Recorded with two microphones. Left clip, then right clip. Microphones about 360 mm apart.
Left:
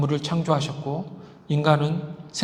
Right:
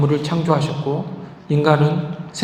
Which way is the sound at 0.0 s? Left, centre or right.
Left.